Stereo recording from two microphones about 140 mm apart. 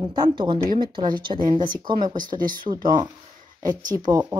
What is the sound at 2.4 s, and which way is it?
Speech, 80° right.